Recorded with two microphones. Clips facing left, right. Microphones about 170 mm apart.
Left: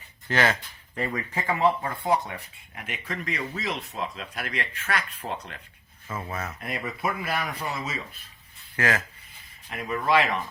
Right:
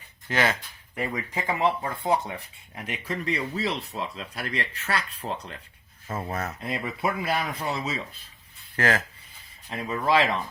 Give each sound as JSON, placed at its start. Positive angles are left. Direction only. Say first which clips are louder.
{"t": 0.3, "sound": "speech", "louder": "left 1 dB", "side_deg": -10}
{"t": 2.7, "sound": "speech", "louder": "right 3 dB", "side_deg": -35}